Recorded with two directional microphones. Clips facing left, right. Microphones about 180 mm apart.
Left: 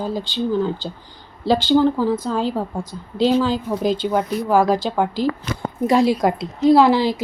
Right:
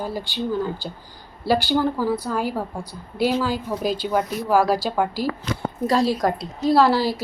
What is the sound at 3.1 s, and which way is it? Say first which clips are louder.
Speech: left 4 dB; 10° right (ahead or behind).